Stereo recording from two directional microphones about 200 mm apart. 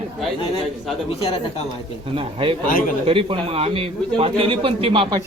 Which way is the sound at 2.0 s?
25° right (ahead or behind).